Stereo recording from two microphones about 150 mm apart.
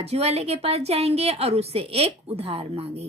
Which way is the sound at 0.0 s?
45° right (ahead or behind).